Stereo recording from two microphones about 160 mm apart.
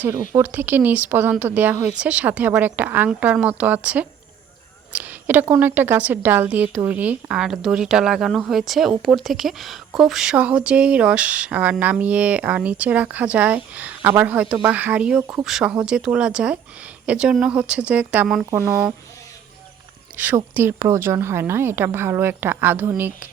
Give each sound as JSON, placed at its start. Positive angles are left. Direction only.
{"t": 0.0, "sound": "a woman's voice", "side_deg": -15}
{"t": 20.1, "sound": "a woman's voice", "side_deg": -10}